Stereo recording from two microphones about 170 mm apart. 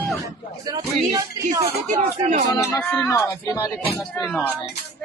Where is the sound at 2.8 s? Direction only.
10° left (ahead or behind).